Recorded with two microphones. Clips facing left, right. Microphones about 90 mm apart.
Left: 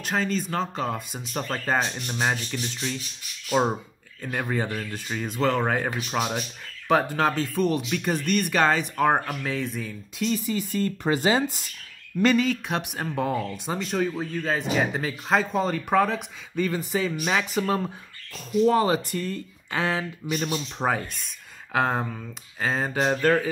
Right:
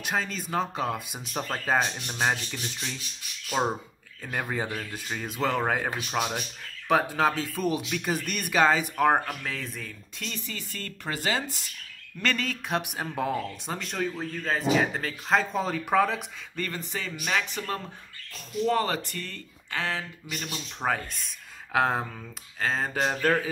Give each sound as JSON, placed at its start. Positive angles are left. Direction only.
{"t": 0.0, "sound": "speech", "side_deg": -5}
{"t": 12.4, "sound": "speech", "side_deg": 0}
{"t": 21.7, "sound": "speech", "side_deg": 0}